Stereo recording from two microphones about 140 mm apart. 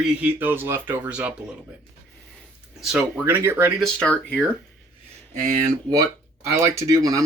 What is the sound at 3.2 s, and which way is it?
Speech, 15° right (ahead or behind).